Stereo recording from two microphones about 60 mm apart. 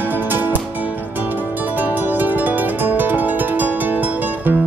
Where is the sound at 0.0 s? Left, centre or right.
Right.